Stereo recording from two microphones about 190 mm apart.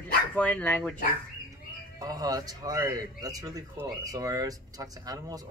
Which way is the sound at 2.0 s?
20° right (ahead or behind).